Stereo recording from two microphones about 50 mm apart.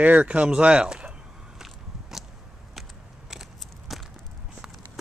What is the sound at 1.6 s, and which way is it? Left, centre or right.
Biting, centre.